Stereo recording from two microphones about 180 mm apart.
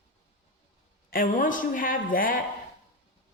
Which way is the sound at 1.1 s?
50° left (ahead or behind).